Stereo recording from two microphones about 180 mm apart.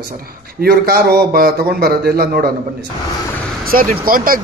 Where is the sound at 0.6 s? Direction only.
55° right (ahead or behind).